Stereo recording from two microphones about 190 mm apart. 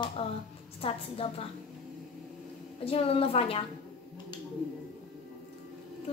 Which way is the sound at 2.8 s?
30° left (ahead or behind).